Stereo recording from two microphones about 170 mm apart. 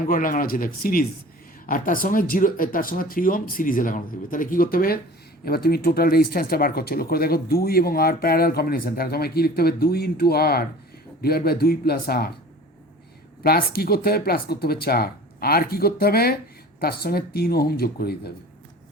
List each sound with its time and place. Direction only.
0.0 s speech: 55° left (ahead or behind)
13.4 s speech: 65° left (ahead or behind)